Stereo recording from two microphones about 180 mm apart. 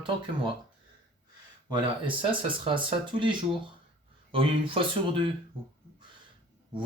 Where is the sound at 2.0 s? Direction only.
30° right (ahead or behind).